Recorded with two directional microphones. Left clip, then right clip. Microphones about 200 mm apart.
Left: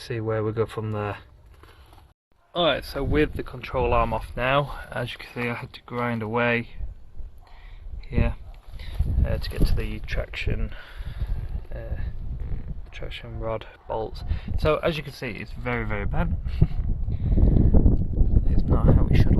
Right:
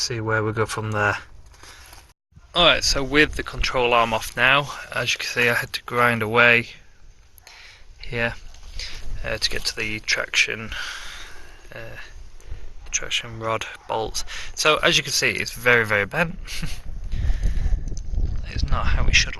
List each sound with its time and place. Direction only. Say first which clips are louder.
0.1 s speech: right 3 dB; 5° right (ahead or behind)
2.5 s speech: right 6 dB; centre (ahead or behind)
7.6 s a sound: right 10 dB; 5° right (ahead or behind)
8.8 s speech: right 5 dB; 5° right (ahead or behind)
18.4 s speech: left 1 dB; 20° left (ahead or behind)